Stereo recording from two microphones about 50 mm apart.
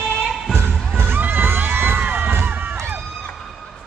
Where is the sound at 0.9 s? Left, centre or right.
Right.